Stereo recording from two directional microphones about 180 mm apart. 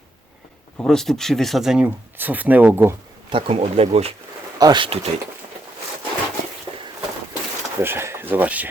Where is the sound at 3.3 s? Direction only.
30° right (ahead or behind).